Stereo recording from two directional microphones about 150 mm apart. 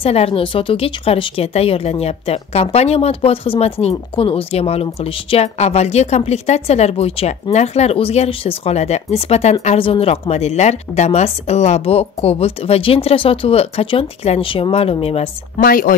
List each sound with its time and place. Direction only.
0.0 s speech: 40° left (ahead or behind)
15.6 s speech: 70° left (ahead or behind)